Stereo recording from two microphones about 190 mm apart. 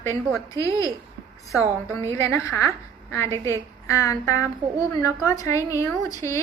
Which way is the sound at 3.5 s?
15° left (ahead or behind).